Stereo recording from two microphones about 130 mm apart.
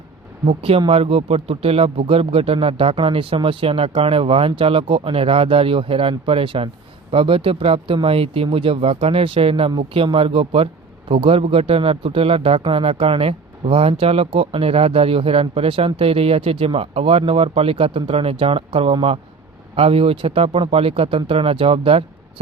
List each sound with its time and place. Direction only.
0.4 s speech: 45° right (ahead or behind)